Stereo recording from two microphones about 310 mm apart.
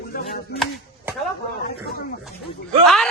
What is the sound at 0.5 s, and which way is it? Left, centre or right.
Speech, left.